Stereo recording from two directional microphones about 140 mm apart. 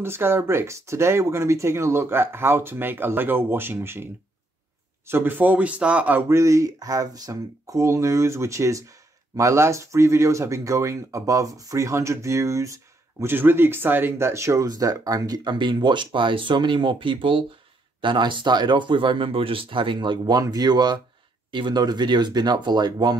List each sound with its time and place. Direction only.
0.0 s speech: 15° right (ahead or behind)